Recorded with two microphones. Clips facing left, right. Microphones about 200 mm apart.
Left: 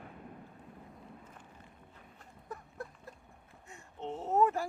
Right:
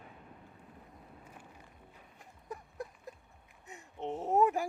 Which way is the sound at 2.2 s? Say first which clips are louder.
Right 1 dB; 15° right (ahead or behind).